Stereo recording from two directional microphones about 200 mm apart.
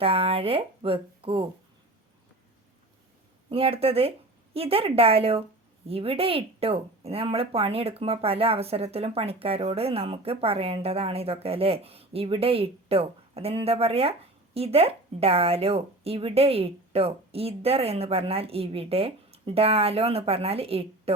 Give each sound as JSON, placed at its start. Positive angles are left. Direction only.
{"t": 0.0, "sound": "speech", "side_deg": -30}
{"t": 3.5, "sound": "speech", "side_deg": -30}